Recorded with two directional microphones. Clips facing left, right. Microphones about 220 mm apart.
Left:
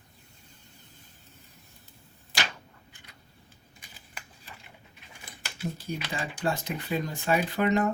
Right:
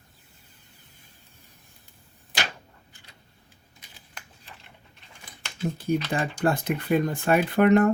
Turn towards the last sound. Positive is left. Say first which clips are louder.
# right 7 dB
turn(degrees=-55)  # may be behind; listen again after turning